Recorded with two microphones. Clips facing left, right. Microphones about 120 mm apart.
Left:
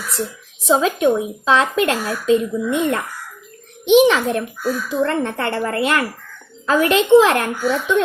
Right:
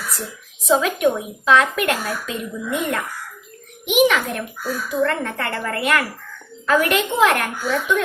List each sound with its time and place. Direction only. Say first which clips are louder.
0.6 s a woman's voice: left 2 dB; 30° left (ahead or behind)